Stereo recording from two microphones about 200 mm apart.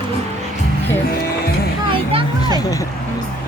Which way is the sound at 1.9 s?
25° right (ahead or behind).